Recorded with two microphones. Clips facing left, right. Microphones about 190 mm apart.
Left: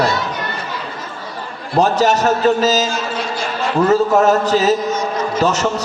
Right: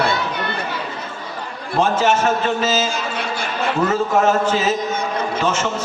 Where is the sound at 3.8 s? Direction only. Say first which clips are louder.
Left 5 dB; 40° left (ahead or behind).